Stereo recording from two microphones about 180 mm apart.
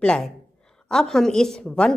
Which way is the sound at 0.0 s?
5° left (ahead or behind).